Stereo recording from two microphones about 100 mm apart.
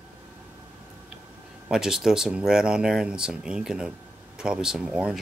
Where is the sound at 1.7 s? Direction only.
5° right (ahead or behind).